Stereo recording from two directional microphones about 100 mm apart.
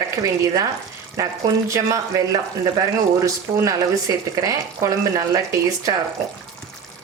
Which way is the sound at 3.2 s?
35° right (ahead or behind).